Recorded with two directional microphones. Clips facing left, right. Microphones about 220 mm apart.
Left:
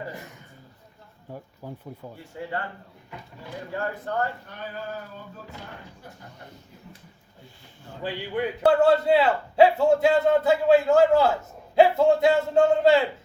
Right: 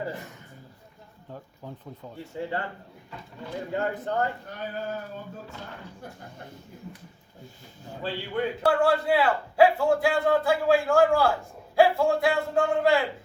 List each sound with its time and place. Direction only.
1.3 s speech: 10° left (ahead or behind)
2.3 s speech: 25° right (ahead or behind)
3.7 s speech: 20° right (ahead or behind)
8.0 s a man's voice: 20° left (ahead or behind)